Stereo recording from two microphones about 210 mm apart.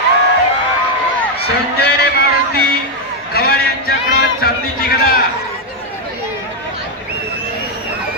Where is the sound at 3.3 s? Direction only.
50° left (ahead or behind).